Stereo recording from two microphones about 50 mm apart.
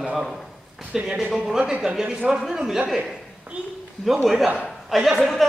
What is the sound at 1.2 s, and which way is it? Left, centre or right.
Speech, centre.